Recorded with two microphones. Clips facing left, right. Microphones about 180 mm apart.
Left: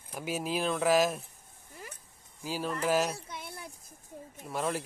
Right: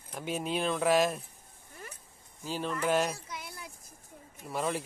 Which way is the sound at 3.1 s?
25° left (ahead or behind).